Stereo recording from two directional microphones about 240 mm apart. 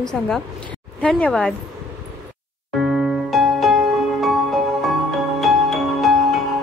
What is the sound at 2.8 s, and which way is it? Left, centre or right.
Music, centre.